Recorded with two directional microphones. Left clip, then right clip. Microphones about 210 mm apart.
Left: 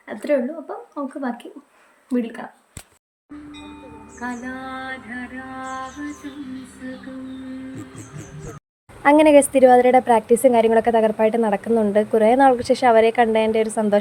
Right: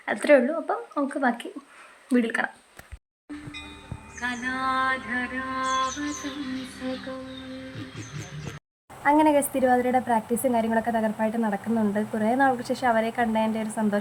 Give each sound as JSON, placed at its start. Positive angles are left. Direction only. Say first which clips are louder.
{"t": 0.0, "sound": "speech", "louder": "right 2 dB", "side_deg": 0}
{"t": 4.2, "sound": "music", "louder": "right 1 dB", "side_deg": 25}
{"t": 4.5, "sound": "mantra", "louder": "right 6 dB", "side_deg": 10}
{"t": 9.0, "sound": "a woman's voice", "louder": "left 8 dB", "side_deg": 30}